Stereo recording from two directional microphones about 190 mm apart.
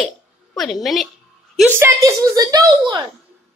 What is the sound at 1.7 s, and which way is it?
Speech, 15° right (ahead or behind).